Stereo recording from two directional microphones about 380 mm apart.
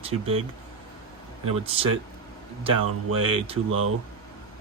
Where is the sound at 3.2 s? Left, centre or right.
Centre.